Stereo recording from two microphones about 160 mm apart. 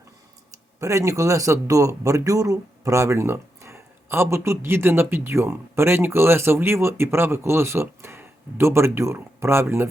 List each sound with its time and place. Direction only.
0.8 s a man's voice: 20° right (ahead or behind)